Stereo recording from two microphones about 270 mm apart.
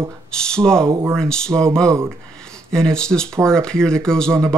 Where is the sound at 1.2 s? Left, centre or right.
Centre.